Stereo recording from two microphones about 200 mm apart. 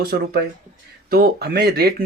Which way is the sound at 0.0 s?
50° right (ahead or behind).